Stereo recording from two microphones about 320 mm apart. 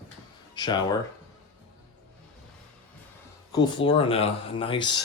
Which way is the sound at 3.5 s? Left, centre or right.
Centre.